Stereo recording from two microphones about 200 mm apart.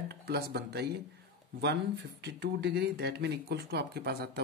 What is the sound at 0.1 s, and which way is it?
Speech, 55° right (ahead or behind).